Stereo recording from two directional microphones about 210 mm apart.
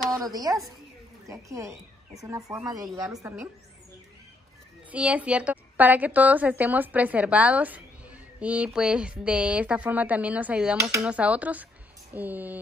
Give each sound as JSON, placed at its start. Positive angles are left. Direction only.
{"t": 0.1, "sound": "a woman's voice", "side_deg": -15}
{"t": 4.9, "sound": "a woman's voice", "side_deg": -5}